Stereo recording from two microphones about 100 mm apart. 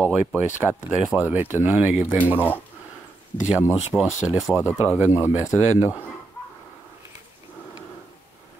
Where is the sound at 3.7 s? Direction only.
10° right (ahead or behind).